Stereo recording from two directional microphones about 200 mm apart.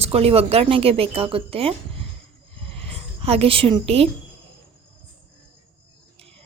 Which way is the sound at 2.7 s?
30° right (ahead or behind).